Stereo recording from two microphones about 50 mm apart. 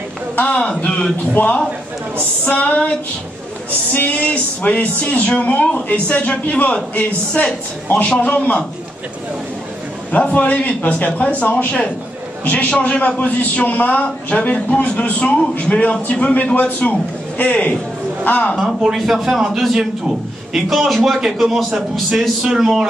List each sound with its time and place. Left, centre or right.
0.4 s a man's voice: left
3.9 s a man's voice: left
10.2 s a man's voice: left
11.5 s a man's voice: centre
18.9 s a man's voice: centre